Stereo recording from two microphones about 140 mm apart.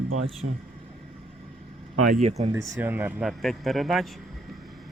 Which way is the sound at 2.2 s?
50° right (ahead or behind).